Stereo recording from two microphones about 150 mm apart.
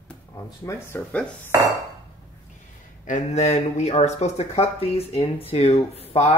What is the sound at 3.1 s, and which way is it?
Speech, 50° left (ahead or behind).